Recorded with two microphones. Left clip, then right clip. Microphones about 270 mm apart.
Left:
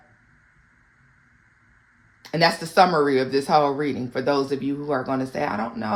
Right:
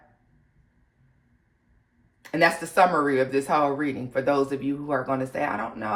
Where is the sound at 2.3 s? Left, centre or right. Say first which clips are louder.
Left 2 dB; left.